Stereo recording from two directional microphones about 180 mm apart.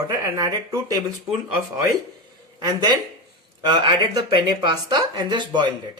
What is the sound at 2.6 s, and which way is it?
Speech, 20° right (ahead or behind).